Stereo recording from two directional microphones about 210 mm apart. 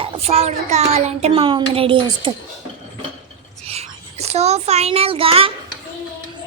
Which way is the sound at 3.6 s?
30° right (ahead or behind).